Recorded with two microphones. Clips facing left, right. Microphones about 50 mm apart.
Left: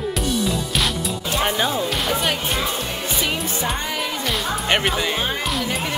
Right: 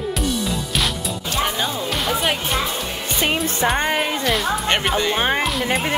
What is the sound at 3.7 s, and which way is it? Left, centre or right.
Music, right.